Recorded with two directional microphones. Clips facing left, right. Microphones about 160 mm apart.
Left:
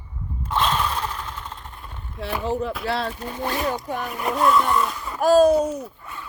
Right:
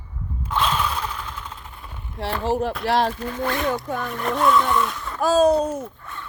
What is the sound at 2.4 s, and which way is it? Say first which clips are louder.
Speech: right 3 dB; 80° right.